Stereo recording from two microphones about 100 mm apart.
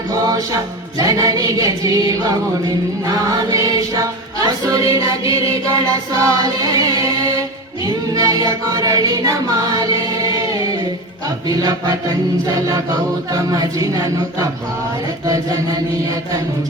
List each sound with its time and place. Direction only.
0.1 s music: 40° right (ahead or behind)
7.9 s a capella: 40° right (ahead or behind)
11.4 s music: 40° right (ahead or behind)
13.3 s music: 35° right (ahead or behind)